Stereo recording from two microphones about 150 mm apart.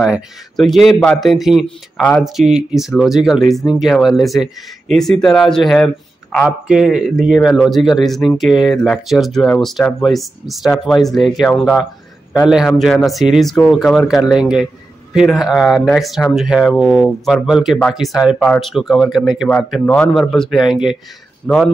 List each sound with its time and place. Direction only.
0.0 s speech: centre (ahead or behind)